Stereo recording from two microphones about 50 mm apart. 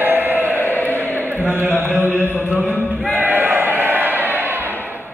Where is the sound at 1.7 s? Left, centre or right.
Right.